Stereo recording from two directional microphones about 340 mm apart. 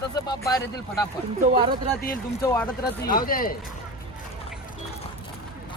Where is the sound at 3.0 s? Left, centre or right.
Left.